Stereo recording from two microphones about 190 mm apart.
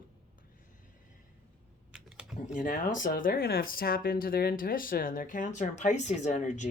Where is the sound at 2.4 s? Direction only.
45° left (ahead or behind).